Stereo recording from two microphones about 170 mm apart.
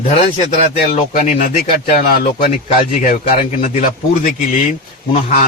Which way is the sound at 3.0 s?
45° left (ahead or behind).